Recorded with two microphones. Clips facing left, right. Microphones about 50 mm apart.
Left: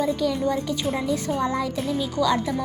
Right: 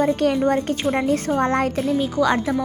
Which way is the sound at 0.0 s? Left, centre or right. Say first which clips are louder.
Right 5 dB; right.